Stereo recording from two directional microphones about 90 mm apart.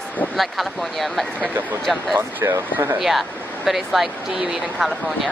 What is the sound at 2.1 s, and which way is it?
Speech, 25° right (ahead or behind).